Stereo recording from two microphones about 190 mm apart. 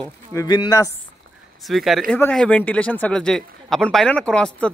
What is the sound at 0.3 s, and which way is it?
Speech, 15° left (ahead or behind).